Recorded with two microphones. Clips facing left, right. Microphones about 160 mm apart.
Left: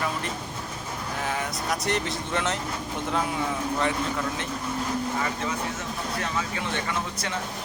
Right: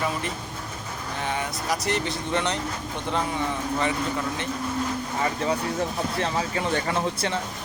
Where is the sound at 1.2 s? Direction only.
Centre (ahead or behind).